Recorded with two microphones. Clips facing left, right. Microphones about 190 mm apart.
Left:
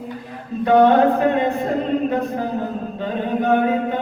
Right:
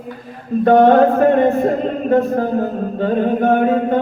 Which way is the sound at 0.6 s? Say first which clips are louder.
Right 3 dB; 45° right (ahead or behind).